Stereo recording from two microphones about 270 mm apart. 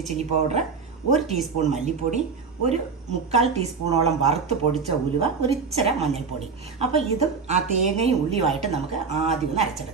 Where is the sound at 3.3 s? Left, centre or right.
Right.